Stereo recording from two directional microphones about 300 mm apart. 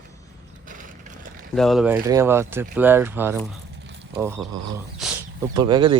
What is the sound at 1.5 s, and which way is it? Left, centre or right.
Speech, centre.